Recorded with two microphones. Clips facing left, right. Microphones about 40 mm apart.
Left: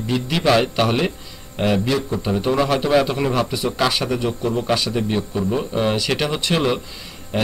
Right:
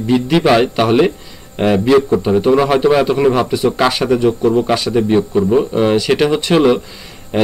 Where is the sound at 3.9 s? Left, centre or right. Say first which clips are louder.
Right 8 dB; centre.